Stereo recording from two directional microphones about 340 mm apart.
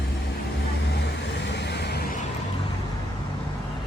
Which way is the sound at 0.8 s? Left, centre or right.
Left.